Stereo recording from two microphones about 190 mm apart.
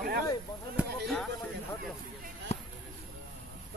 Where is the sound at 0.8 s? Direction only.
Centre (ahead or behind).